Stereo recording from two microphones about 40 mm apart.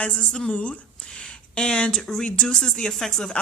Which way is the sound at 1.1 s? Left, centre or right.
Left.